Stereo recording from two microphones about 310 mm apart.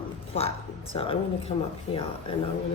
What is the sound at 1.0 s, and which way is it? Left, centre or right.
Speech, centre.